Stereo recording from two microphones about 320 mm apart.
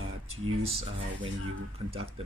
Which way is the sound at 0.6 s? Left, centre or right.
Centre.